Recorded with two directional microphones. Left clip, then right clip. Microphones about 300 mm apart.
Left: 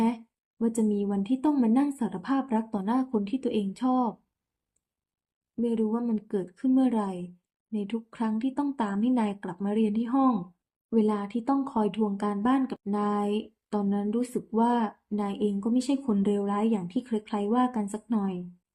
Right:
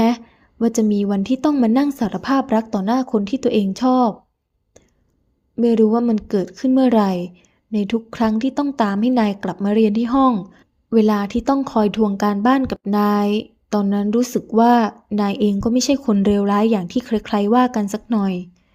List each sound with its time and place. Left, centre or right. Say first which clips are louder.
0.8 s speech: right 8 dB; right
5.5 s speech: right 13 dB; right